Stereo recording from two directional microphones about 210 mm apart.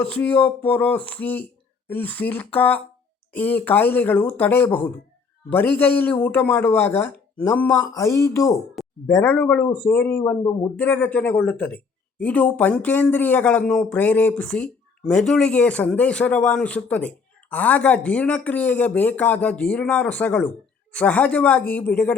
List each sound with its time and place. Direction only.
0.0 s speech: 5° left (ahead or behind)